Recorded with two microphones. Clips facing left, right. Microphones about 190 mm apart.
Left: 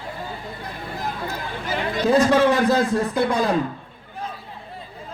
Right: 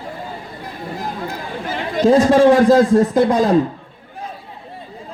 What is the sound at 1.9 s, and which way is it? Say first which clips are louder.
A man's voice: right 5 dB; 40° right (ahead or behind).